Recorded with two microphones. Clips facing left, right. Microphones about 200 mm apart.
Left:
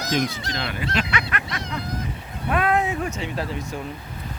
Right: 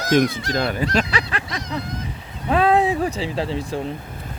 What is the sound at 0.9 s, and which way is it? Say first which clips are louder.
Snicker: right 4 dB; 30° right (ahead or behind).